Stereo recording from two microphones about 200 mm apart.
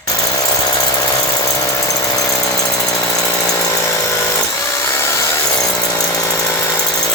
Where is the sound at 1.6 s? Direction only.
15° left (ahead or behind).